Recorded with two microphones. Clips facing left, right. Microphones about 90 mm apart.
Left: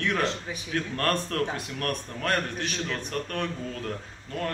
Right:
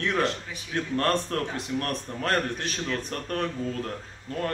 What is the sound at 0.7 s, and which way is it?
A man's voice, 25° right (ahead or behind).